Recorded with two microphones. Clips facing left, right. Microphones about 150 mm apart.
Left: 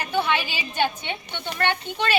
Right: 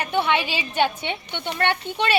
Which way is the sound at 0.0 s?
25° right (ahead or behind).